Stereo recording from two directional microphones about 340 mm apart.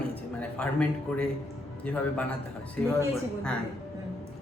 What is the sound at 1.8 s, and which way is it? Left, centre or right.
Speech, centre.